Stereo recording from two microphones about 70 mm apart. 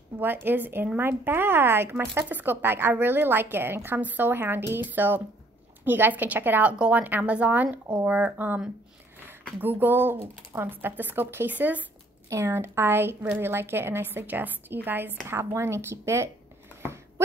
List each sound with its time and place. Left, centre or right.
0.2 s speech: right
12.3 s speech: right